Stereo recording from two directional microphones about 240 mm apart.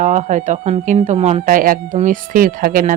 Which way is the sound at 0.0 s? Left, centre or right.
Right.